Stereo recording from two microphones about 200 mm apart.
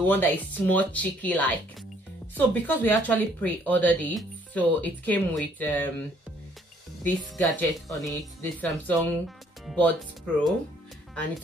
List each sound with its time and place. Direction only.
0.0 s speech: 10° left (ahead or behind)
7.0 s speech: 10° left (ahead or behind)